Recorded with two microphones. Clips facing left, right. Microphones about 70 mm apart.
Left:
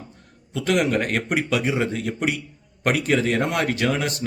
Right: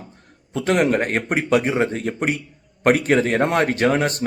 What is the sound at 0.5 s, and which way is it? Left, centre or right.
Speech, right.